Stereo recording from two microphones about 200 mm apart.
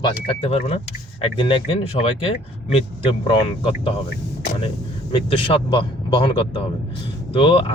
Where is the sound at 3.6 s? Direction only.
25° left (ahead or behind).